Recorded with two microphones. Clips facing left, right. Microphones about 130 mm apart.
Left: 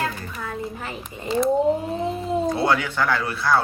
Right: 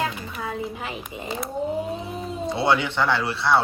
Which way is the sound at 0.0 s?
15° right (ahead or behind).